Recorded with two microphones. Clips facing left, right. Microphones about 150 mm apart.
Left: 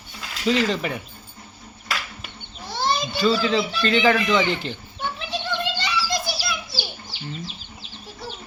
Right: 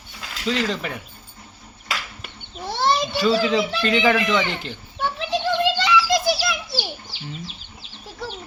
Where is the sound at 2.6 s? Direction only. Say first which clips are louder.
Right 3 dB; 70° right (ahead or behind).